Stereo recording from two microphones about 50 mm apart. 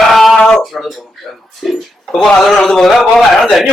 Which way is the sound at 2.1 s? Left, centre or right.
Centre.